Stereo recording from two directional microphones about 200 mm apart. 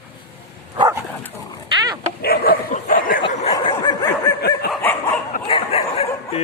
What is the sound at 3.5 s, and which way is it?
Snicker, 20° left (ahead or behind).